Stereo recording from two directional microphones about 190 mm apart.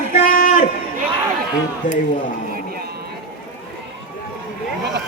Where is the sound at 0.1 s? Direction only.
50° left (ahead or behind).